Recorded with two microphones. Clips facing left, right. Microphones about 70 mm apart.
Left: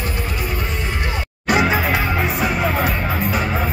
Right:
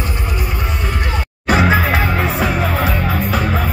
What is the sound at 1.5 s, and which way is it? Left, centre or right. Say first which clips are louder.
Music: right 3 dB; right.